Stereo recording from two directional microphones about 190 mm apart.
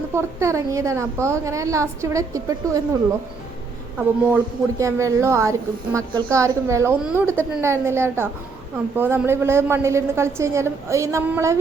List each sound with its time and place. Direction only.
0.1 s a woman's voice: 15° right (ahead or behind)
3.9 s a woman's voice: 10° right (ahead or behind)